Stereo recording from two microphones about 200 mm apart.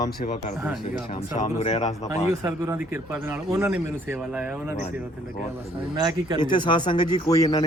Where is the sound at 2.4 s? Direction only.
10° right (ahead or behind).